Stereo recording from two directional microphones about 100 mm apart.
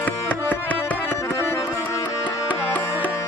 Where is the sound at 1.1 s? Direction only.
25° left (ahead or behind).